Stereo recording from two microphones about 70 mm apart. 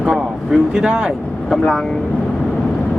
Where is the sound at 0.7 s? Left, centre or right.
Centre.